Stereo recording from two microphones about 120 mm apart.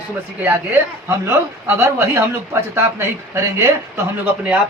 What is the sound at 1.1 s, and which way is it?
Speech, 20° right (ahead or behind).